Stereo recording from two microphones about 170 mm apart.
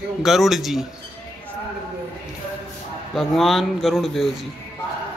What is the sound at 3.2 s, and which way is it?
Speech, centre (ahead or behind).